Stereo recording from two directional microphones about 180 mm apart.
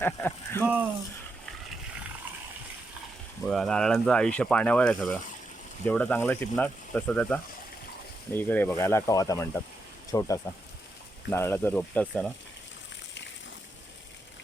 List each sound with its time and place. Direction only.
0.0 s speech: 10° left (ahead or behind)
3.4 s speech: 5° left (ahead or behind)